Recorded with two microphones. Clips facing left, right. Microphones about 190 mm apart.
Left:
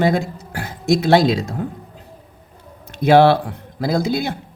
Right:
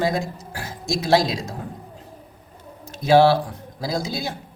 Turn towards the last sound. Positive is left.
turn(degrees=60)  # may be behind; listen again after turning